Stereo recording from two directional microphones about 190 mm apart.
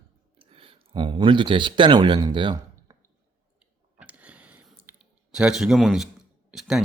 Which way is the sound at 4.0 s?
5° right (ahead or behind).